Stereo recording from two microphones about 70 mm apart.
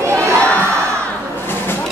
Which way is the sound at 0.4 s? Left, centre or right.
Left.